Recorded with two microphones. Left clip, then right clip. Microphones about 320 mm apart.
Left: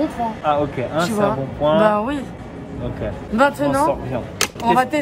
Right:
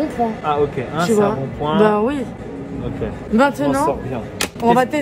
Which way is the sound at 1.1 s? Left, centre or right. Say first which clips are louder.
Right 3 dB; centre.